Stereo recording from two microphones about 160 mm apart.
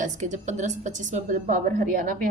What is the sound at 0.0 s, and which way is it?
A woman's voice, 50° right (ahead or behind).